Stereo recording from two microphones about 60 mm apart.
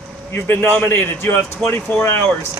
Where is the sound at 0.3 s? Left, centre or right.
Left.